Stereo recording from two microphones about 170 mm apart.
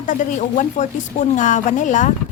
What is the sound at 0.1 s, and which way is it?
Speech, 45° left (ahead or behind).